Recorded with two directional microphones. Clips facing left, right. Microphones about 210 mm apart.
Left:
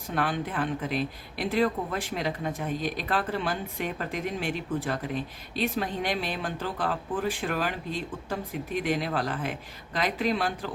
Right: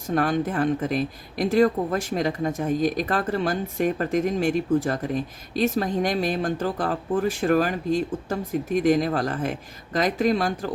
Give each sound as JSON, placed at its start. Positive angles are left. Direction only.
{"t": 0.1, "sound": "speech", "side_deg": -45}